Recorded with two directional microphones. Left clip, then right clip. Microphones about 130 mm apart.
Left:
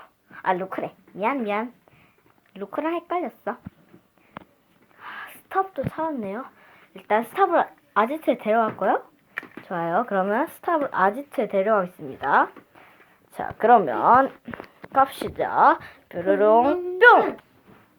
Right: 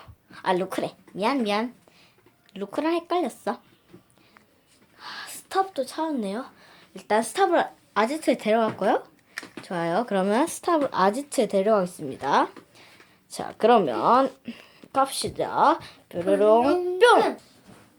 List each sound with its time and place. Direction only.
0.0 s a sound: 35° right (ahead or behind)
1.2 s a woman's voice: 30° right (ahead or behind)
2.6 s speech: 35° right (ahead or behind)
4.9 s a woman's voice: 25° right (ahead or behind)
9.6 s speech: 10° right (ahead or behind)
10.1 s a woman's voice: 40° right (ahead or behind)
12.2 s a woman's voice: 35° right (ahead or behind); by 17.2 s 10° right (ahead or behind)